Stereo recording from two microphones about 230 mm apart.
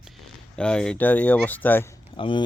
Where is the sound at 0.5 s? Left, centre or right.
Centre.